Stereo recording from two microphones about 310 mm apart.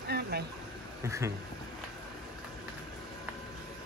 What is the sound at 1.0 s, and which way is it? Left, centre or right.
Speech, centre.